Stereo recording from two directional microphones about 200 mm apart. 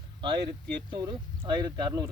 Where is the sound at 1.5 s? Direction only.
20° right (ahead or behind).